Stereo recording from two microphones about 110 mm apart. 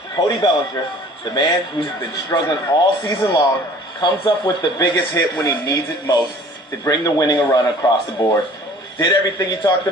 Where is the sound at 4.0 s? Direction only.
45° left (ahead or behind).